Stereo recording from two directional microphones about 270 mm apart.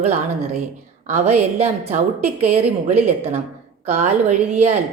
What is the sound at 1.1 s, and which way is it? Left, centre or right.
A woman's voice, right.